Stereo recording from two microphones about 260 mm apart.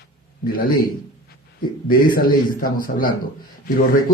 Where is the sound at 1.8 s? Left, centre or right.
Left.